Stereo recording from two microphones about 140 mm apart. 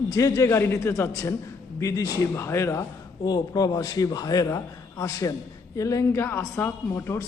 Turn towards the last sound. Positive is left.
turn(degrees=20)  # may be behind; listen again after turning